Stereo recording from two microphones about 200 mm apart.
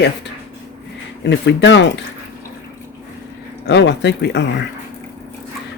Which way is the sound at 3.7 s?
60° left (ahead or behind).